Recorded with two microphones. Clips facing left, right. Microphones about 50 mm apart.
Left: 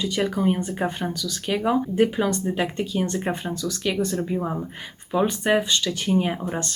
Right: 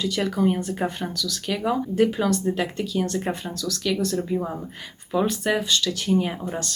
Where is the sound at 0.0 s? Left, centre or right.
Centre.